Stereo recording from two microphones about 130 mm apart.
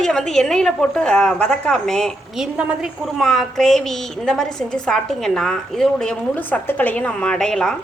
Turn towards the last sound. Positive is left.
turn(degrees=5)  # may be behind; listen again after turning